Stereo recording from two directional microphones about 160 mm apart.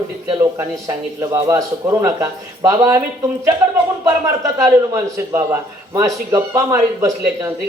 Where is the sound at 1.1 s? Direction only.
20° right (ahead or behind).